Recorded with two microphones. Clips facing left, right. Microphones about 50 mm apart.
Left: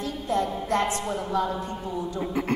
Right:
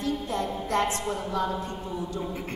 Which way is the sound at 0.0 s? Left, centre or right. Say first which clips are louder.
Left 2 dB; left.